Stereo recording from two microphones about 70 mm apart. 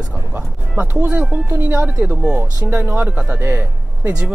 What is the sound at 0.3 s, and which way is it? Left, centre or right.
Music, right.